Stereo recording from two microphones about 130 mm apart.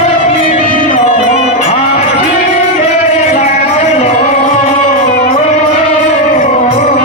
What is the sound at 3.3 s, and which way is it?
Music, 60° left (ahead or behind).